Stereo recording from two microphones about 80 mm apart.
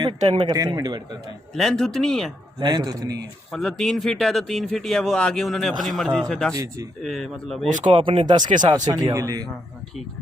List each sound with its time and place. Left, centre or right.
0.0 s speech: right
1.5 s speech: centre
2.6 s speech: right
2.8 s speech: right
3.5 s a man's voice: centre
8.0 s speech: right
9.1 s a man's voice: right